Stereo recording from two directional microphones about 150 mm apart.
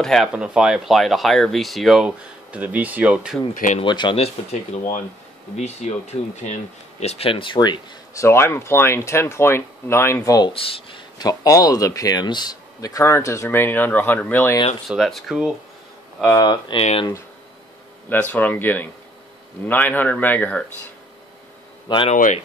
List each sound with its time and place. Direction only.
0.0 s speech: centre (ahead or behind)
3.5 s speech: 55° left (ahead or behind)
3.8 s speech: 30° left (ahead or behind)
10.5 s speech: 40° left (ahead or behind); by 14.6 s 15° left (ahead or behind)
14.9 s speech: centre (ahead or behind)
16.3 s speech: 30° left (ahead or behind)
18.3 s a man's voice: 10° left (ahead or behind)
21.8 s speech: 35° left (ahead or behind)
22.1 s speech: 60° left (ahead or behind)